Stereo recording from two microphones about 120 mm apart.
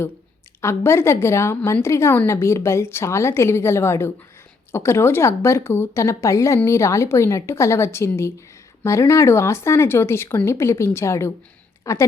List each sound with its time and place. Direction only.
0.6 s a woman's voice: 20° left (ahead or behind)